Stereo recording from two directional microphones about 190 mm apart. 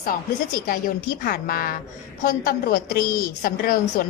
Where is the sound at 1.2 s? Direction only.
50° left (ahead or behind).